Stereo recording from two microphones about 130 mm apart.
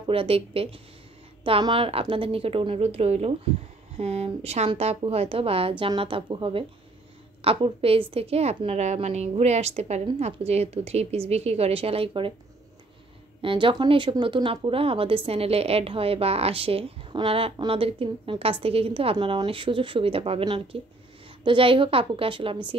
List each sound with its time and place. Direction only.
0.0 s speech: 45° right (ahead or behind)
13.4 s speech: 40° right (ahead or behind)